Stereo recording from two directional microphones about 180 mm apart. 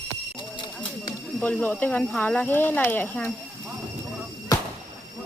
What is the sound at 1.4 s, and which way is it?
Speech, 5° left (ahead or behind).